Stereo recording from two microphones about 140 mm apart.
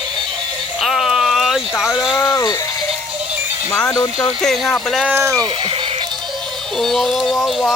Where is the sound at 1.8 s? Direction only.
5° right (ahead or behind).